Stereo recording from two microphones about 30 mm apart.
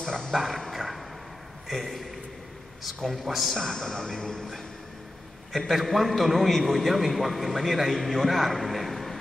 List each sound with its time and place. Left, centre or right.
0.3 s dog: centre
1.7 s a man's voice: centre
5.7 s a man's voice: centre